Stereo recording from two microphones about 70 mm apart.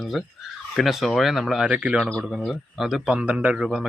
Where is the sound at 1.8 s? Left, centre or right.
Centre.